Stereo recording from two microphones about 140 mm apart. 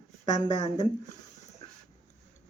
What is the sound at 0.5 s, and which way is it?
Speech, 50° left (ahead or behind).